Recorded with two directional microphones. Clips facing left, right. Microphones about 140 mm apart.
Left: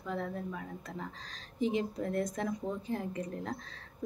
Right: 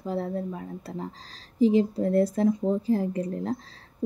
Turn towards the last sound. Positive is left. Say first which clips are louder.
# right 9 dB
turn(degrees=-35)  # may be behind; listen again after turning